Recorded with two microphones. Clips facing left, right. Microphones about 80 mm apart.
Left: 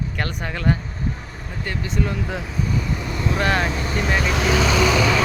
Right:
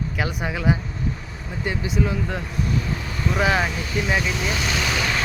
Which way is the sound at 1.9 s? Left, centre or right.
Centre.